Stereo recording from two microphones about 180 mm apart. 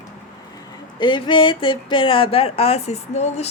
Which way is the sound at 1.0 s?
25° left (ahead or behind).